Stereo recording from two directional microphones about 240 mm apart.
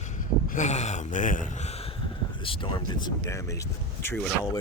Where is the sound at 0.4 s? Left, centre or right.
Left.